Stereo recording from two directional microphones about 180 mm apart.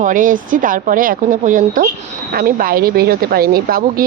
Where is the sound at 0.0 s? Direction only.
45° right (ahead or behind).